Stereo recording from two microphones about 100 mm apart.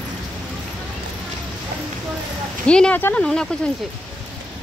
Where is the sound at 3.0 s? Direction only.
20° left (ahead or behind).